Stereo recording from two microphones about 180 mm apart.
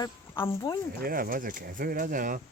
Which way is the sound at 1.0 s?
55° right (ahead or behind).